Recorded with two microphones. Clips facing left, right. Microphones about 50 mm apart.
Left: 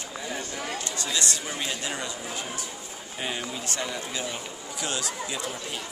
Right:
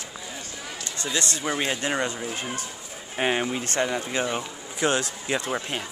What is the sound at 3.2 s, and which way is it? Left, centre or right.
Speech, right.